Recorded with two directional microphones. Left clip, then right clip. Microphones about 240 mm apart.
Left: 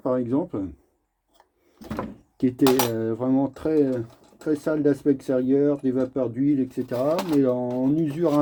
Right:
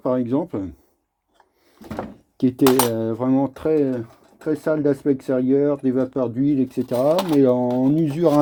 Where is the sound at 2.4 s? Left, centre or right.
Right.